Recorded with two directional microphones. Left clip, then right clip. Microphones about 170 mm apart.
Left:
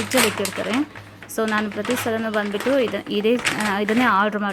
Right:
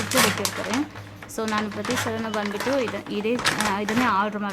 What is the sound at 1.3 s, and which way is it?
Speech, 30° left (ahead or behind).